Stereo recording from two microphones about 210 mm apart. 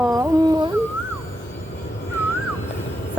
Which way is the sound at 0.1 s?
15° right (ahead or behind).